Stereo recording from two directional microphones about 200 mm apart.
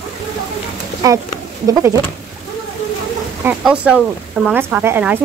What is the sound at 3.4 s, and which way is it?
Speech, 5° right (ahead or behind).